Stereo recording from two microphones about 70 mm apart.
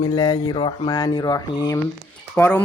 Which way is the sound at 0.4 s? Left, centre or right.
Left.